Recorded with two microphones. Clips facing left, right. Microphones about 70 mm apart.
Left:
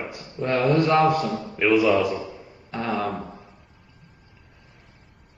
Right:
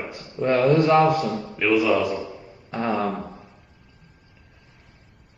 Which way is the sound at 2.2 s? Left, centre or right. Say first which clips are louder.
Right 1 dB; right.